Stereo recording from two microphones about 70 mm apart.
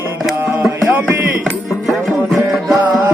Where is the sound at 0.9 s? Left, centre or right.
Right.